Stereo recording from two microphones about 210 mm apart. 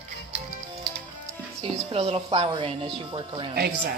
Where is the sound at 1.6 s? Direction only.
30° right (ahead or behind).